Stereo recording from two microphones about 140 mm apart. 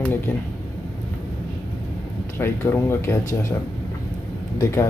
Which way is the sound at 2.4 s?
15° left (ahead or behind).